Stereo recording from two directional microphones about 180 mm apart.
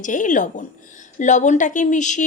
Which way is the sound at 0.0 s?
45° left (ahead or behind).